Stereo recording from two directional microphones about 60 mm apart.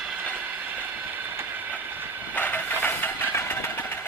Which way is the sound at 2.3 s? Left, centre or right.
Left.